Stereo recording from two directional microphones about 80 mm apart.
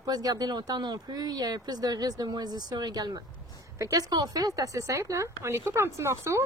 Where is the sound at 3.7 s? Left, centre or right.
Right.